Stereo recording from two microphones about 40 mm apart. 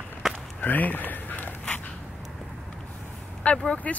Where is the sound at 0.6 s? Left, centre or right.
Left.